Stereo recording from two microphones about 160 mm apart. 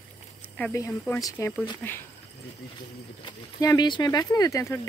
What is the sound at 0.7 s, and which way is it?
Speech, 15° left (ahead or behind).